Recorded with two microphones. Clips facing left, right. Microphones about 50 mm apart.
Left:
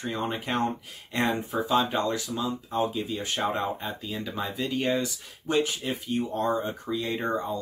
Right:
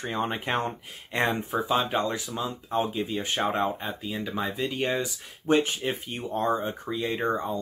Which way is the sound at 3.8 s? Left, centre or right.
Centre.